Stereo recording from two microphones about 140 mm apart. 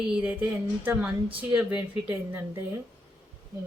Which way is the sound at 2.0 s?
15° right (ahead or behind).